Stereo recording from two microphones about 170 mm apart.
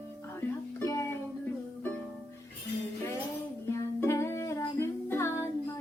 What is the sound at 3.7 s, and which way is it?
Music, 15° left (ahead or behind).